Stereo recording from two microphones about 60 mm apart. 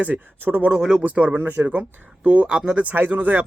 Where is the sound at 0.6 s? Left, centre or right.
Centre.